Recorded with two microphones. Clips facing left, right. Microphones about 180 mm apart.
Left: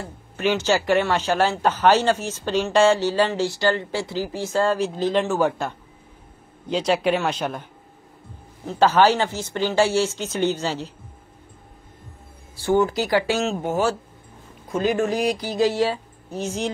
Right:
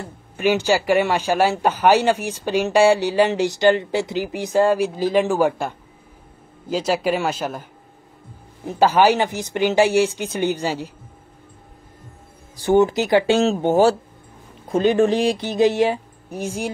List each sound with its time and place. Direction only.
0.4 s speech: 10° right (ahead or behind)
8.6 s speech: 10° right (ahead or behind)
12.5 s speech: 20° right (ahead or behind)